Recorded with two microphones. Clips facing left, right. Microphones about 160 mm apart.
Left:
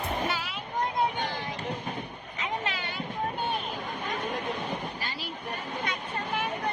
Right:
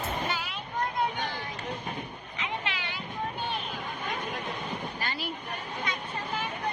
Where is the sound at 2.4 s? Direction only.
40° left (ahead or behind).